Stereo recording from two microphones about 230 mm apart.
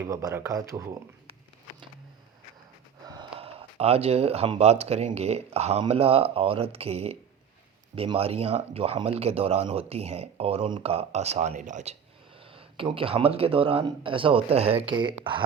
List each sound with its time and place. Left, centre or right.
0.0 s speech: centre
3.3 s speech: right